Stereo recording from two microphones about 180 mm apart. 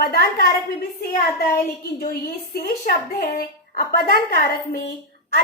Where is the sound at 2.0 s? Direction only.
55° left (ahead or behind).